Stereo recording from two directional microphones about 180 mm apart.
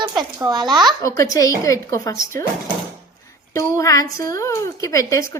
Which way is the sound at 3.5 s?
20° left (ahead or behind).